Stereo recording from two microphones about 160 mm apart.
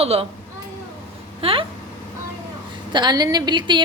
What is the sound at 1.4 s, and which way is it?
Speech, 35° right (ahead or behind).